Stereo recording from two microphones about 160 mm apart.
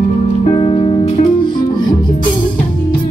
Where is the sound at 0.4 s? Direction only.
40° left (ahead or behind).